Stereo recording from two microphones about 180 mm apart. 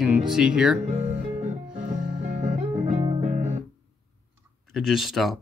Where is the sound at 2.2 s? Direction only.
40° right (ahead or behind).